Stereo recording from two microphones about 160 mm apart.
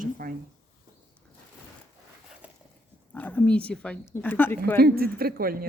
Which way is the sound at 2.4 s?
10° right (ahead or behind).